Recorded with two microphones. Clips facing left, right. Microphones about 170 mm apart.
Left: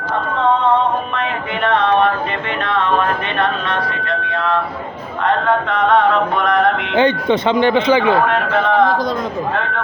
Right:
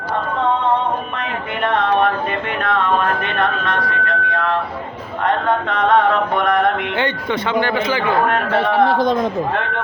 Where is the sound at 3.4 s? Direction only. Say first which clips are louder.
Left 1 dB; 45° right (ahead or behind).